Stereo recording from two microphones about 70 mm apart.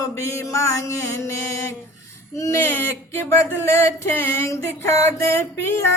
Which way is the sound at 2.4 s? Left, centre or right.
Left.